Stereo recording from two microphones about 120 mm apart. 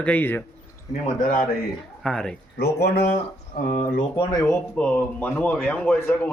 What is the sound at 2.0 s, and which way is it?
Speech, 5° left (ahead or behind).